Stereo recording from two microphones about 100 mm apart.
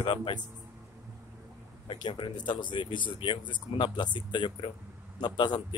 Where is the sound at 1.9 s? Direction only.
45° left (ahead or behind).